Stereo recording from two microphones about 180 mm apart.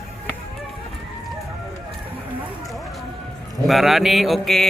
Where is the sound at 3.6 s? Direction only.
Centre (ahead or behind).